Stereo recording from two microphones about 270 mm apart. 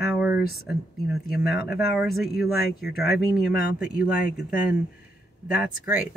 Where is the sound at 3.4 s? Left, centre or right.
Left.